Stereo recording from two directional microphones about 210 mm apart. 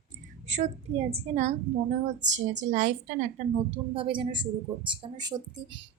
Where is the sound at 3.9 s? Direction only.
25° right (ahead or behind).